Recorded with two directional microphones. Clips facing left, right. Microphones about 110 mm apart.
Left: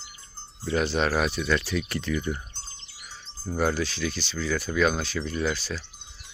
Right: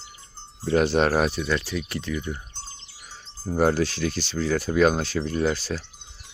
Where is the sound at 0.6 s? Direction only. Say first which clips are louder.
Right 5 dB; 45° right (ahead or behind); by 2.2 s 15° right (ahead or behind).